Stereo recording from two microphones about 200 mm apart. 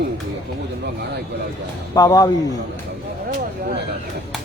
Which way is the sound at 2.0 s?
20° left (ahead or behind).